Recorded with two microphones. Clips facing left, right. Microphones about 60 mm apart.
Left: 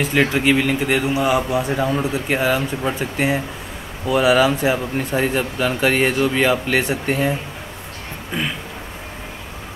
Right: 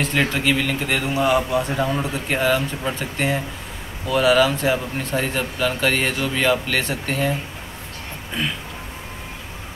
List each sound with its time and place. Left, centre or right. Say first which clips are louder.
0.0 s a man's voice: left 3 dB; centre
8.4 s a man's voice: left 1 dB; centre